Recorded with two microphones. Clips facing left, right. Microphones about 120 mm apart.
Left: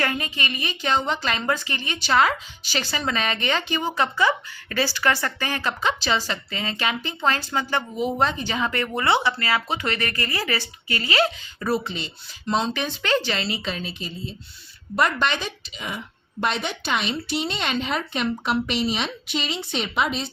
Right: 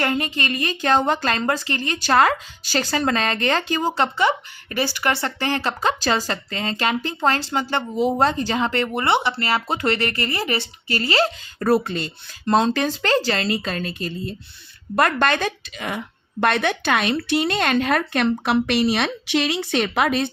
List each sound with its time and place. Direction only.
0.0 s a woman's voice: 35° right (ahead or behind)
5.9 s a woman's voice: 45° right (ahead or behind); by 9.6 s 25° right (ahead or behind)
9.6 s a woman's voice: 35° right (ahead or behind)
11.7 s a woman's voice: 50° right (ahead or behind)